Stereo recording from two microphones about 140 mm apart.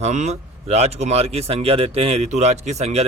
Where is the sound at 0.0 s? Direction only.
55° right (ahead or behind).